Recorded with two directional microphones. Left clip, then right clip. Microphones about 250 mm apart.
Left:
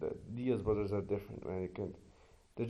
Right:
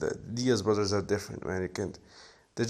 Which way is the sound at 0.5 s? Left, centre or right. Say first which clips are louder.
Right 7 dB; right.